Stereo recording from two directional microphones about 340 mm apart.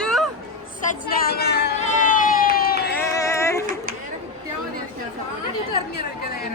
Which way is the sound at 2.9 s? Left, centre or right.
Centre.